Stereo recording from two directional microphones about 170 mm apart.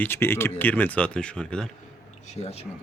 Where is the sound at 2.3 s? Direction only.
40° left (ahead or behind).